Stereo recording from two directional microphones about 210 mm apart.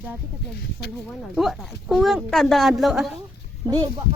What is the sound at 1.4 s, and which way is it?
A woman's voice, centre (ahead or behind).